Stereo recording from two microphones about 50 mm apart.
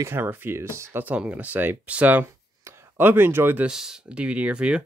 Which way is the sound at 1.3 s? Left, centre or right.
Right.